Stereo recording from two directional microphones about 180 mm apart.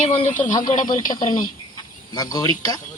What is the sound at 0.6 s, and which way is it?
Speech, 45° left (ahead or behind).